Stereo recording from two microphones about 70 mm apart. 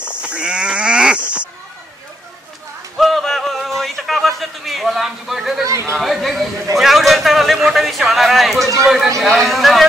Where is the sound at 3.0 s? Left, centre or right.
Centre.